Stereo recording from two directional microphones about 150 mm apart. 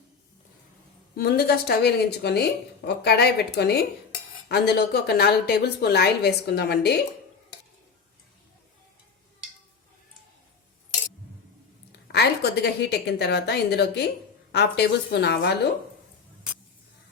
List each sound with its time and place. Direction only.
1.1 s a woman's voice: 90° left
11.9 s a woman's voice: 90° left